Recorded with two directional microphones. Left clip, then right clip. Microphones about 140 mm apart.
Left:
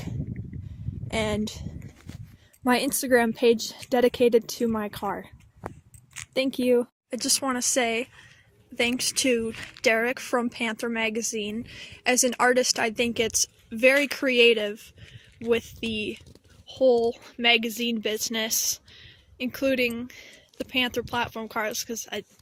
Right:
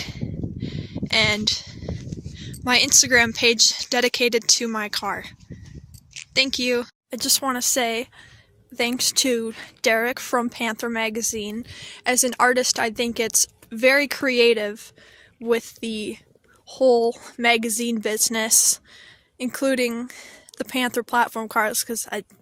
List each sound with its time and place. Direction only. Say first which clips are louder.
1.0 s speech: right 9 dB; 25° left (ahead or behind)
2.4 s speech: right 5 dB; 40° left (ahead or behind)
6.7 s a woman's voice: left 1 dB; centre (ahead or behind); by 16.2 s 30° right (ahead or behind)
16.6 s a woman's voice: right 3 dB; 45° right (ahead or behind)